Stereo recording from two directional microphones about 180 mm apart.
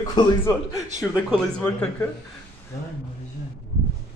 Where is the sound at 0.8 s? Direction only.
40° right (ahead or behind).